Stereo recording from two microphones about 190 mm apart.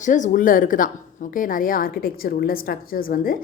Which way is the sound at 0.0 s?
40° left (ahead or behind).